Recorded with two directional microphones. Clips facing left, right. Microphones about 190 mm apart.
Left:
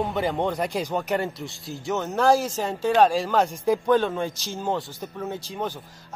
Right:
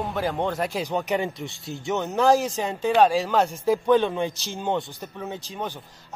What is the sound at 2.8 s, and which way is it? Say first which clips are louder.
A man's voice: even; 10° right (ahead or behind).